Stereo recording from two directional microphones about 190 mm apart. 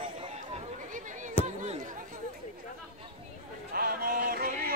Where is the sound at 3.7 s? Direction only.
50° right (ahead or behind).